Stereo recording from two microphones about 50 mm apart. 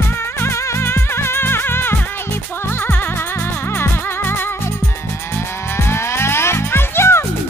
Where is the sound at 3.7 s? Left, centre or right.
Left.